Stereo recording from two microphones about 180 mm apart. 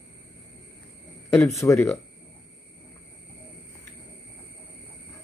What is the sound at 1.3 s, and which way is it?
Speech, 15° left (ahead or behind).